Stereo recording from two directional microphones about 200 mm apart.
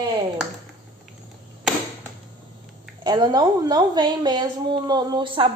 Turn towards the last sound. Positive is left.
turn(degrees=-25)  # may be behind; listen again after turning